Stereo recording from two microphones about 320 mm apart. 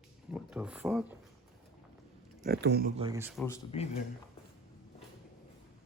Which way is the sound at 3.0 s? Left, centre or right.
Centre.